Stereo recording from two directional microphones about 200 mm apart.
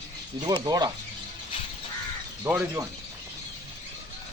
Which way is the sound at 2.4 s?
10° right (ahead or behind).